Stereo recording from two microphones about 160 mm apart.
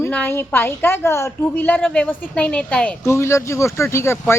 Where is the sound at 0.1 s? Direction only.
10° left (ahead or behind).